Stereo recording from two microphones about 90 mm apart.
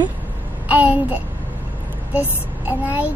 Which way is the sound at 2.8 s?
20° right (ahead or behind).